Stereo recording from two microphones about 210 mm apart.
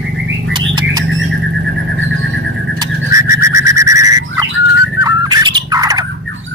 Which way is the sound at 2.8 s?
15° right (ahead or behind).